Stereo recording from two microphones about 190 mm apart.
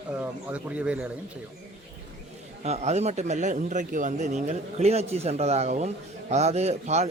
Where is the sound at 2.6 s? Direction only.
35° right (ahead or behind).